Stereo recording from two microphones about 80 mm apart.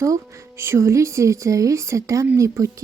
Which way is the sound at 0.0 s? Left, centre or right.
Right.